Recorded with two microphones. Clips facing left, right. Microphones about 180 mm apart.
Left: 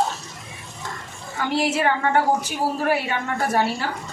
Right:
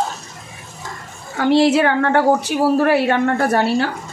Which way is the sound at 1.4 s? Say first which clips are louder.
Right 9 dB; 70° right (ahead or behind).